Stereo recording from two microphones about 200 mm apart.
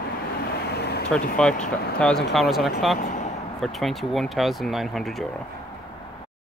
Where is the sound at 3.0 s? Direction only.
40° left (ahead or behind).